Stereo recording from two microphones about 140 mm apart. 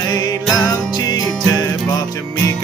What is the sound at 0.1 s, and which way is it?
Music, 30° left (ahead or behind).